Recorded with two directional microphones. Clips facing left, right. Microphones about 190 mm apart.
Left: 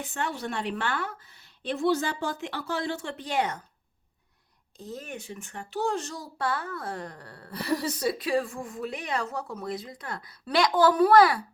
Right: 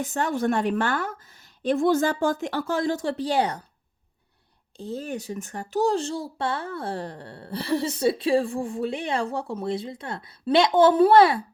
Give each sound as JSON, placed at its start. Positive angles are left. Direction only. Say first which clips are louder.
{"t": 0.0, "sound": "a woman's voice", "louder": "right 8 dB", "side_deg": -45}
{"t": 4.8, "sound": "speech", "louder": "right 7 dB", "side_deg": -30}